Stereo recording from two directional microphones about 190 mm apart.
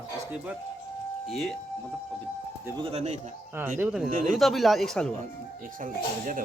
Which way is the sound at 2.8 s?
30° right (ahead or behind).